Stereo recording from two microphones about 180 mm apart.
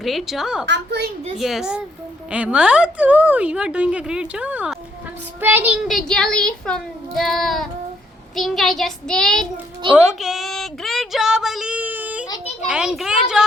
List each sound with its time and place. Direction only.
0.0 s a child's voice: centre (ahead or behind)
0.6 s a woman's voice: 75° right (ahead or behind)
1.4 s a child's voice: centre (ahead or behind)
9.9 s a sound: 5° right (ahead or behind)
12.6 s a child's voice: 5° right (ahead or behind)